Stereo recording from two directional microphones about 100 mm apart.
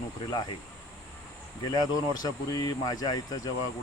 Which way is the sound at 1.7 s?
40° left (ahead or behind).